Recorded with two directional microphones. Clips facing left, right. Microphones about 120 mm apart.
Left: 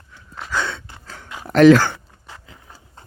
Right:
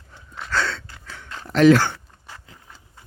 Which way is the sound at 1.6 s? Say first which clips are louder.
Left 4 dB; 55° left (ahead or behind).